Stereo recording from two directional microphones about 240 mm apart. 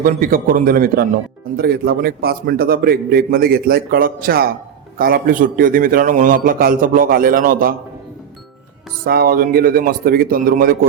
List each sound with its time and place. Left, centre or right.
0.0 s a man's voice: right
9.0 s a man's voice: right